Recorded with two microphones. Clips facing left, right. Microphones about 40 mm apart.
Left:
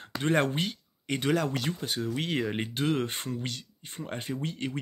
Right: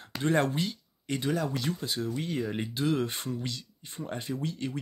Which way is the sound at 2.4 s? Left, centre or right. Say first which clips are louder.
Left 1 dB; left.